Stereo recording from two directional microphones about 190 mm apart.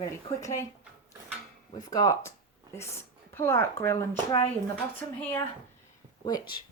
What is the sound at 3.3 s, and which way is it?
Speech, 15° left (ahead or behind).